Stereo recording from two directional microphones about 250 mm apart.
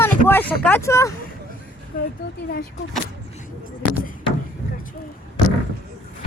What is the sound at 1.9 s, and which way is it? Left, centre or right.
Speech, left.